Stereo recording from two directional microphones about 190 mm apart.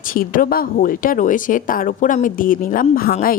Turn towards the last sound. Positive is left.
turn(degrees=50)  # may be behind; listen again after turning